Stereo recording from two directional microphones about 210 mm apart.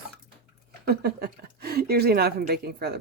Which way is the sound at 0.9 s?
50° right (ahead or behind).